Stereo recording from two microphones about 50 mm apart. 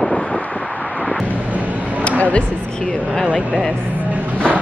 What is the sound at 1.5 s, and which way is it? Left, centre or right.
Vehicle, right.